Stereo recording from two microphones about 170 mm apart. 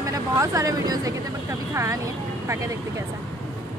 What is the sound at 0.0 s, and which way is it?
Speech, 20° right (ahead or behind).